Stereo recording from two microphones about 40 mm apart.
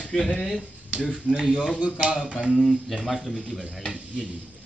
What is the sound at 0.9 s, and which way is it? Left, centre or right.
Speech, left.